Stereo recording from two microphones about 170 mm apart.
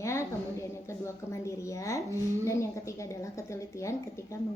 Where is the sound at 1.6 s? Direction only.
20° left (ahead or behind).